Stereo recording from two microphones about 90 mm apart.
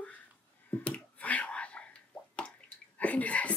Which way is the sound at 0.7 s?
15° left (ahead or behind).